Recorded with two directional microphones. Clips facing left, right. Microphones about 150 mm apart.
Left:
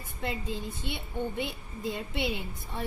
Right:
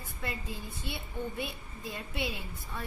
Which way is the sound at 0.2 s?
20° left (ahead or behind).